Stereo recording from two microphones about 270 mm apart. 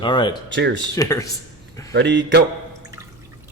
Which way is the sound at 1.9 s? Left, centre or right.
Right.